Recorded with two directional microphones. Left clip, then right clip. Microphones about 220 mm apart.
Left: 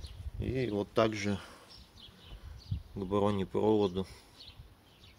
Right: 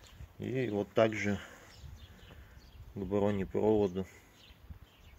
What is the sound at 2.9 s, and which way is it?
Speech, 15° left (ahead or behind).